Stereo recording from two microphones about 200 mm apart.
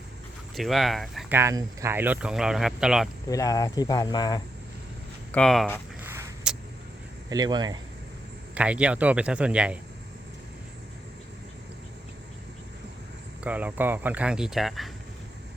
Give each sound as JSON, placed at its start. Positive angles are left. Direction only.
{"t": 0.5, "sound": "speech", "side_deg": 0}
{"t": 1.4, "sound": "speech", "side_deg": -15}
{"t": 3.2, "sound": "speech", "side_deg": 15}
{"t": 5.3, "sound": "speech", "side_deg": 5}
{"t": 6.0, "sound": "vehicle", "side_deg": -10}
{"t": 7.3, "sound": "speech", "side_deg": -20}
{"t": 8.5, "sound": "speech", "side_deg": -5}
{"t": 13.4, "sound": "speech", "side_deg": -5}